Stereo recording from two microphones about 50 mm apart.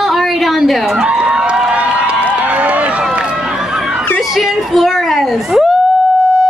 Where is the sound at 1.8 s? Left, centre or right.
Right.